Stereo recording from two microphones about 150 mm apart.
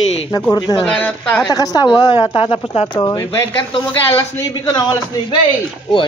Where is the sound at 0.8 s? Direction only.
10° left (ahead or behind).